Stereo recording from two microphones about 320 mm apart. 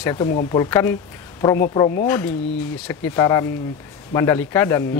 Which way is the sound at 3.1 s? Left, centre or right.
Centre.